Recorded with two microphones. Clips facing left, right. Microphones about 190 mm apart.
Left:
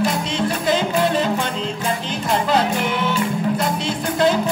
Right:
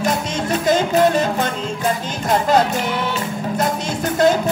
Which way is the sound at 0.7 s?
45° right (ahead or behind).